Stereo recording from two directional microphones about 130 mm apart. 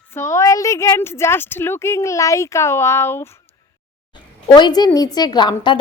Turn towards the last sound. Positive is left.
turn(degrees=35)  # may be behind; listen again after turning